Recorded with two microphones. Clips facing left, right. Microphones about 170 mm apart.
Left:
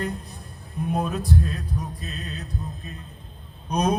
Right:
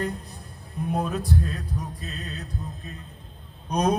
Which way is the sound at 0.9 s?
20° left (ahead or behind).